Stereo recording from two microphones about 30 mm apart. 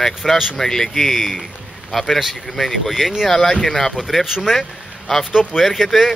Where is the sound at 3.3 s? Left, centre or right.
Centre.